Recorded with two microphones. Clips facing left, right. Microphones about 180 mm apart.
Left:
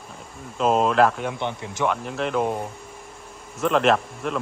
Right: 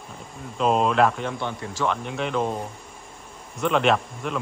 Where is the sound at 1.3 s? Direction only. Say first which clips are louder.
Left 1 dB; 20° left (ahead or behind).